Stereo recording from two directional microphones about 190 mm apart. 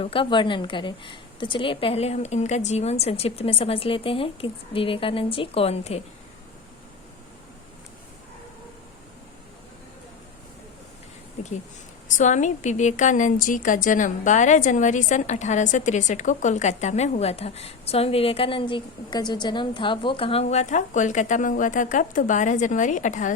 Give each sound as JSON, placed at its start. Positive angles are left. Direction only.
{"t": 0.0, "sound": "a woman's voice", "side_deg": 30}
{"t": 12.1, "sound": "a woman's voice", "side_deg": 40}